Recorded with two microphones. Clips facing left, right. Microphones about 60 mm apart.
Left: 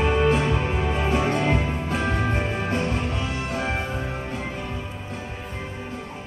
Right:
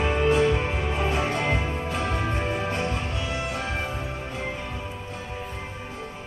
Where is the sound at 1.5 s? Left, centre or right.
Left.